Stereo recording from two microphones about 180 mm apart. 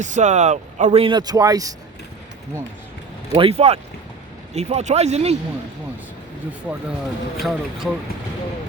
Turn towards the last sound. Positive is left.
turn(degrees=0)  # may be behind; listen again after turning